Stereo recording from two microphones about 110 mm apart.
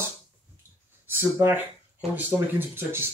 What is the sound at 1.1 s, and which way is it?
Speech, 20° right (ahead or behind).